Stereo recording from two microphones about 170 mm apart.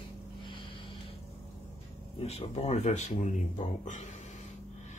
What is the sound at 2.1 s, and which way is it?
Speech, 40° left (ahead or behind).